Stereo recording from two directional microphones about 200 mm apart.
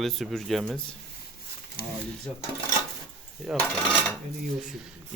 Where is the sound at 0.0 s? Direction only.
Centre (ahead or behind).